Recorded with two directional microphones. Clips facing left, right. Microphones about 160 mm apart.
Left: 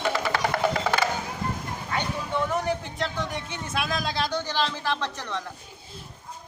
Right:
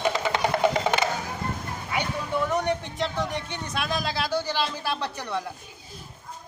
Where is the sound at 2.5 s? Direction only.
Centre (ahead or behind).